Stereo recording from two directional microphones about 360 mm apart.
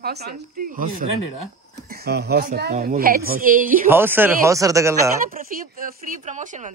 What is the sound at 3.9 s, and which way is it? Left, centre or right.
Speech, centre.